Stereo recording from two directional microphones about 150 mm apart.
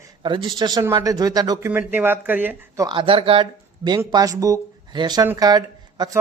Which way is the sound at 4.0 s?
20° right (ahead or behind).